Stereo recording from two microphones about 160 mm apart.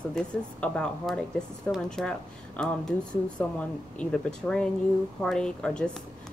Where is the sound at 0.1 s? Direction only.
5° left (ahead or behind).